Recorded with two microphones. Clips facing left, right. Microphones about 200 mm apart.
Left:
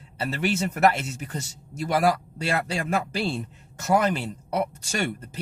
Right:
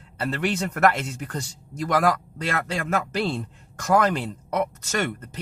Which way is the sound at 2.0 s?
10° left (ahead or behind).